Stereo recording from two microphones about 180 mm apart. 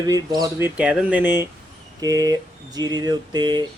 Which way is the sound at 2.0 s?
20° right (ahead or behind).